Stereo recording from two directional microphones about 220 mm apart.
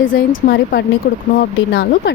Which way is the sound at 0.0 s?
40° left (ahead or behind).